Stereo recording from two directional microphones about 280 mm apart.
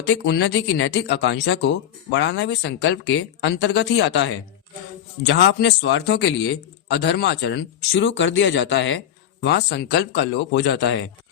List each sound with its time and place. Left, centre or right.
0.1 s a man's voice: left